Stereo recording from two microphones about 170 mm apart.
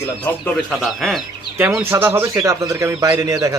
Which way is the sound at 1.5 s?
10° right (ahead or behind).